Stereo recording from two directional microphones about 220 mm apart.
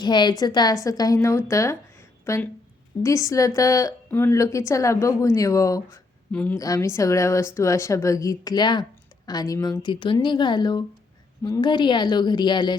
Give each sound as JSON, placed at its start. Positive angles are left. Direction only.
{"t": 0.0, "sound": "a woman's voice", "side_deg": 20}